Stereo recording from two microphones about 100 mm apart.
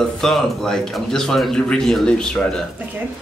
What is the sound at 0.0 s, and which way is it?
A man's voice, 5° left (ahead or behind).